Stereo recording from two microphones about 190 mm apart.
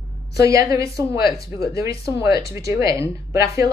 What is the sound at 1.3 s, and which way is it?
Speech, 55° left (ahead or behind).